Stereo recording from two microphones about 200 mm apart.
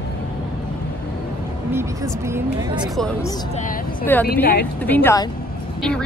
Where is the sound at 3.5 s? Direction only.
40° left (ahead or behind).